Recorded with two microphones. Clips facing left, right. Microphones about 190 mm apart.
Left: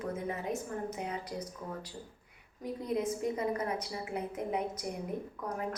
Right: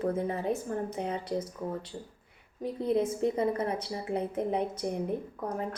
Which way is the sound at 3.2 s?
30° right (ahead or behind).